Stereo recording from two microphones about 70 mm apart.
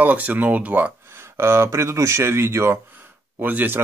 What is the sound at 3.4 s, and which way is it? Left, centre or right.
Speech, right.